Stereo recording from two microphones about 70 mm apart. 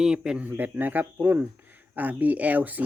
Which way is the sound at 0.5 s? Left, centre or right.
Right.